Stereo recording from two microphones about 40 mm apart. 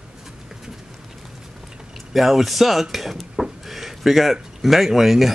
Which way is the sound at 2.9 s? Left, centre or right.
Centre.